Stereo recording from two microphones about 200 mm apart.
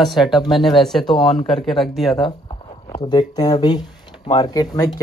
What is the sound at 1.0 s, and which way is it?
Speech, 20° left (ahead or behind).